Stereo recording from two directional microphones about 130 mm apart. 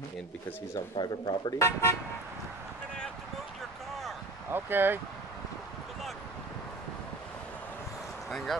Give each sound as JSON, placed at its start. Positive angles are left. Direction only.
{"t": 0.9, "sound": "speech", "side_deg": 35}
{"t": 1.6, "sound": "speech", "side_deg": 20}
{"t": 4.5, "sound": "speech", "side_deg": -15}
{"t": 8.3, "sound": "speech", "side_deg": 0}